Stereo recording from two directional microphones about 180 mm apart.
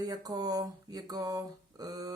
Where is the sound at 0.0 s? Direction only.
20° right (ahead or behind).